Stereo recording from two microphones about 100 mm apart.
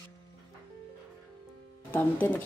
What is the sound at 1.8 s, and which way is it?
Speech, 20° left (ahead or behind).